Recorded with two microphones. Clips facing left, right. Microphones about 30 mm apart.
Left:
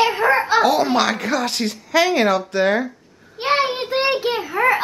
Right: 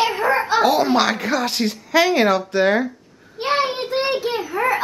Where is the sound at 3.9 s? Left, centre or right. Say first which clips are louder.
Left 2 dB; centre.